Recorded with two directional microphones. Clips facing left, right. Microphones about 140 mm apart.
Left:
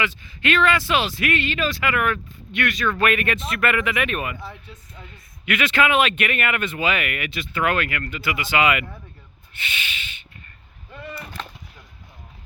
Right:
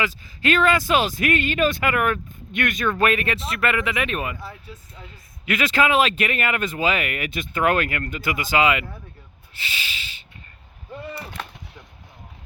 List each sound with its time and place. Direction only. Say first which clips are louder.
0.0 s speech: right 1 dB; 40° right (ahead or behind)
2.9 s speech: right 1 dB; 30° right (ahead or behind)
4.4 s speech: even; centre (ahead or behind)
5.5 s speech: even; 35° right (ahead or behind)
7.3 s speech: right 3 dB; 45° right (ahead or behind)
8.6 s speech: left 1 dB; 30° right (ahead or behind)
9.6 s a sound: left 1 dB; 35° right (ahead or behind)